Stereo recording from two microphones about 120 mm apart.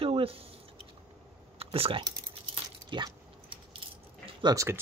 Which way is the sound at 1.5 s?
55° right (ahead or behind).